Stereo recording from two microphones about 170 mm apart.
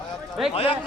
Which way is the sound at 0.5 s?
35° left (ahead or behind).